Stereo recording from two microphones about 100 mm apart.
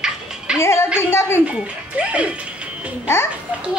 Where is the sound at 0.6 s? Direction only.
25° left (ahead or behind).